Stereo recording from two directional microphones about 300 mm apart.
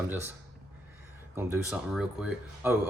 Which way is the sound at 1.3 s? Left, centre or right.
Centre.